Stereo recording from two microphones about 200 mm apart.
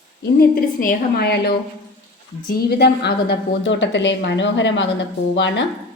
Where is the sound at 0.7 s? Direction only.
50° left (ahead or behind).